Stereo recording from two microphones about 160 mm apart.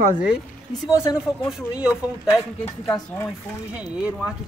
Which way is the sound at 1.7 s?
5° right (ahead or behind).